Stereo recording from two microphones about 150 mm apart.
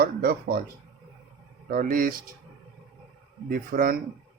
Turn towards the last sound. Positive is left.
turn(degrees=-70)  # may be behind; listen again after turning